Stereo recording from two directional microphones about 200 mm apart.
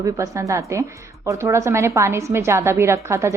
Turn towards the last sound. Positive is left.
turn(degrees=-15)  # may be behind; listen again after turning